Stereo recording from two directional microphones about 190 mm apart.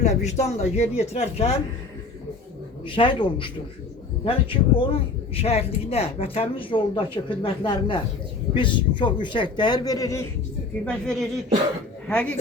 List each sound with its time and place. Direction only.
0.0 s speech: 35° left (ahead or behind)
2.8 s speech: 25° left (ahead or behind)
10.8 s speech: 5° left (ahead or behind)